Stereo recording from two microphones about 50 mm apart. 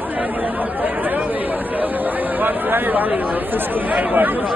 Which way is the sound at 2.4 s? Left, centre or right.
Right.